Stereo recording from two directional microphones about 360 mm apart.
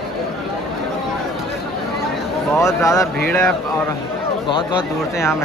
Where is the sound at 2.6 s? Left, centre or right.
Centre.